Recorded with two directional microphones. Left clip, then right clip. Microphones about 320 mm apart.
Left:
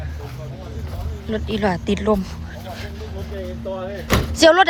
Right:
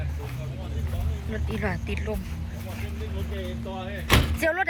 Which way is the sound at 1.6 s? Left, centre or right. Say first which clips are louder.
Left 10 dB; centre.